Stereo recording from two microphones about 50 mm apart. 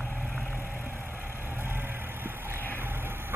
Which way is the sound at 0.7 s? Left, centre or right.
Right.